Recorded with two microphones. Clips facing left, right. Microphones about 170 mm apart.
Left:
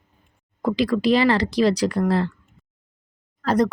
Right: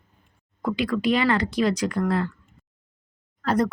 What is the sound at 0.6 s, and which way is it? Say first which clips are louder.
Speech: left 4 dB; 35° left (ahead or behind).